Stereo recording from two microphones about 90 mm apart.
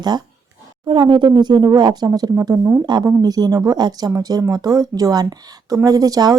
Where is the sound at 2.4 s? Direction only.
35° right (ahead or behind).